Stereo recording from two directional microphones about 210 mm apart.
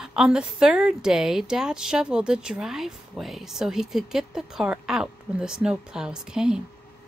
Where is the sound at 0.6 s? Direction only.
5° right (ahead or behind).